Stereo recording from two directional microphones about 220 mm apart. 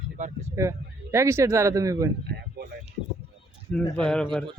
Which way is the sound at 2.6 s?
45° right (ahead or behind).